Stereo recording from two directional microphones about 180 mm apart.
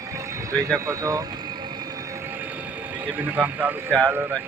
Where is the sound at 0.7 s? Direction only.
15° right (ahead or behind).